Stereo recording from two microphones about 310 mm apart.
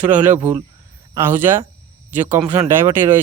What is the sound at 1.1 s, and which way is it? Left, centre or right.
Speech, centre.